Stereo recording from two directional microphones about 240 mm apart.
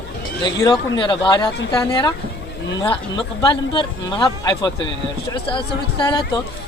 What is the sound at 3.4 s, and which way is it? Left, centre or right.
Speech, centre.